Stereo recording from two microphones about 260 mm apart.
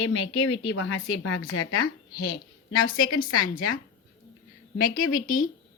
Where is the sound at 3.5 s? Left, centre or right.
Left.